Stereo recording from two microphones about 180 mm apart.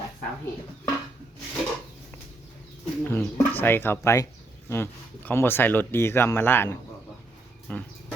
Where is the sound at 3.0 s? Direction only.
10° left (ahead or behind).